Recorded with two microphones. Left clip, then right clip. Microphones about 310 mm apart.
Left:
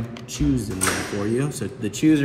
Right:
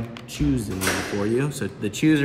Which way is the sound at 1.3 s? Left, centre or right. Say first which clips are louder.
Right 1 dB; centre.